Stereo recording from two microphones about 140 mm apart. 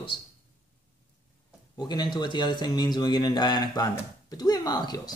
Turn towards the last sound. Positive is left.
turn(degrees=30)  # may be behind; listen again after turning